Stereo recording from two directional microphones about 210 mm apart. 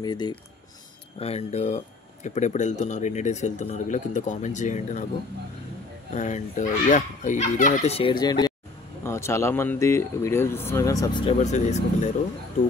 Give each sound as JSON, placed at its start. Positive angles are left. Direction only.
{"t": 0.0, "sound": "speech", "side_deg": 20}
{"t": 1.2, "sound": "speech", "side_deg": 30}
{"t": 6.1, "sound": "speech", "side_deg": 35}
{"t": 11.3, "sound": "speech", "side_deg": 35}